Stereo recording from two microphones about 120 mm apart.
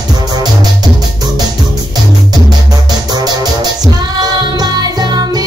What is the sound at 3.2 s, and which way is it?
Music, 35° right (ahead or behind).